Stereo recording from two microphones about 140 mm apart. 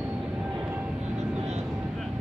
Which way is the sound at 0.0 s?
5° right (ahead or behind).